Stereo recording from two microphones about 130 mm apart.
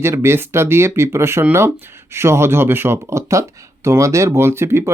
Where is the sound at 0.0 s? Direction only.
20° right (ahead or behind).